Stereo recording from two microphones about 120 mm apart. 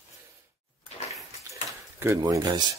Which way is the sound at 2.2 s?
30° right (ahead or behind).